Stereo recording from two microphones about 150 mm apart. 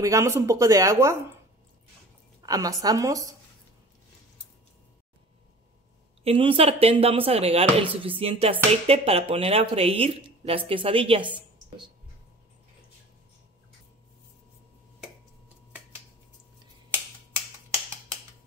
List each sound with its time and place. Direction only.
0.0 s speech: 20° right (ahead or behind)
2.4 s speech: 25° right (ahead or behind)
6.2 s speech: 35° right (ahead or behind)